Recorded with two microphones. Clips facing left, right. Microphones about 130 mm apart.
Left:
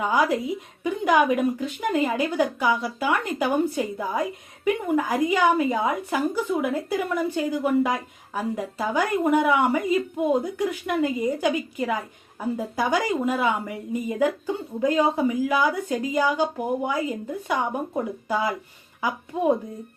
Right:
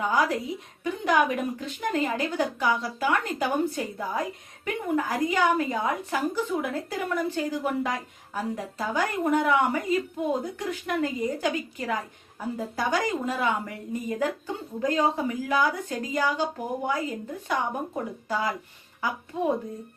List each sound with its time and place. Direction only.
0.1 s speech: 10° left (ahead or behind)